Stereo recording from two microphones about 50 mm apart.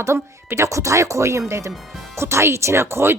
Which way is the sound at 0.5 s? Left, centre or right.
Right.